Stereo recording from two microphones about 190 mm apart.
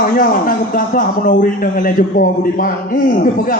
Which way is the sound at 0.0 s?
45° left (ahead or behind).